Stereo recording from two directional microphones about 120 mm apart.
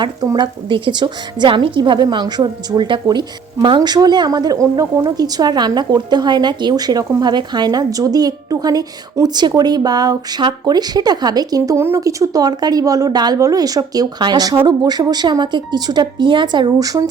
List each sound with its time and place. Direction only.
0.0 s a woman's voice: 40° right (ahead or behind)